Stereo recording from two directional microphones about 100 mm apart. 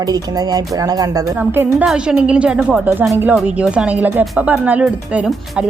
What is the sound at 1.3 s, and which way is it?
Speech, 20° right (ahead or behind).